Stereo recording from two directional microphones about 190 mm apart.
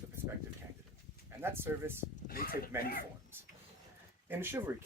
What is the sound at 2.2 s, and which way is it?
Speech, 50° left (ahead or behind).